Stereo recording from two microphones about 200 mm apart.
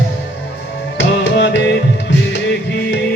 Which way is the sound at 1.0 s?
60° left (ahead or behind).